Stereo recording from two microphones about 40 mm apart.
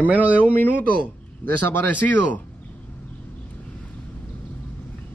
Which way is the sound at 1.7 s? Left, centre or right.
Left.